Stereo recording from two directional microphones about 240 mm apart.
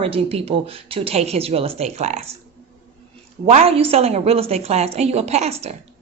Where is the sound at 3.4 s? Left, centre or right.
Right.